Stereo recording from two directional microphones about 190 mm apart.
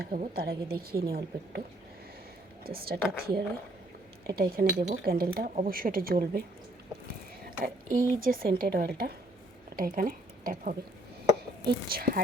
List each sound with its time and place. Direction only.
0.0 s speech: 50° right (ahead or behind)
2.6 s speech: 50° right (ahead or behind)
7.6 s speech: 50° right (ahead or behind)